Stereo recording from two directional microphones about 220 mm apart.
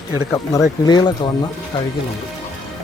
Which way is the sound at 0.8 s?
20° left (ahead or behind).